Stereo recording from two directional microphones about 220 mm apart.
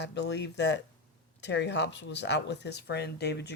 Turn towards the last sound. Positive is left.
turn(degrees=50)  # may be behind; listen again after turning